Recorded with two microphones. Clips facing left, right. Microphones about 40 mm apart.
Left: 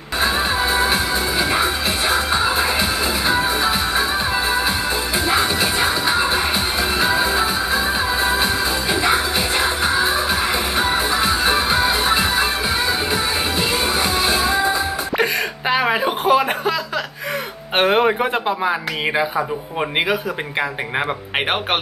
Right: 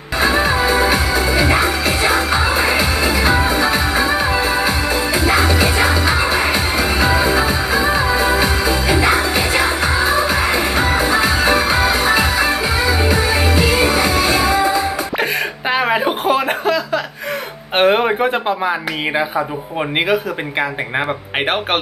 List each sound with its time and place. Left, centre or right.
0.4 s music: right
2.0 s music: right
3.3 s music: centre
5.8 s music: right
6.5 s music: centre
10.5 s music: centre
11.1 s music: right
11.8 s music: centre
15.7 s a sound: centre
17.7 s speech: centre